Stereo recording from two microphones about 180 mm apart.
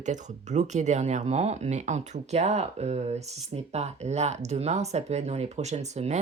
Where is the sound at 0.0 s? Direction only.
40° right (ahead or behind).